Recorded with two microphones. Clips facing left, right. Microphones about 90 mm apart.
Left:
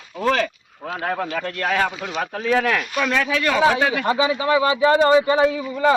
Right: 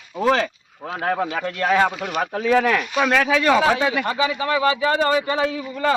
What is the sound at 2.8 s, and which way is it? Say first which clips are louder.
Speech: right 2 dB; 20° right (ahead or behind).